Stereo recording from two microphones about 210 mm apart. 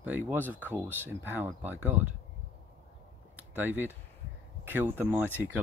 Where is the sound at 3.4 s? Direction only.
10° right (ahead or behind).